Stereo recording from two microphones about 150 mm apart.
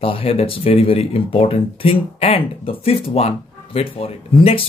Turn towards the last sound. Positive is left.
turn(degrees=40)  # may be behind; listen again after turning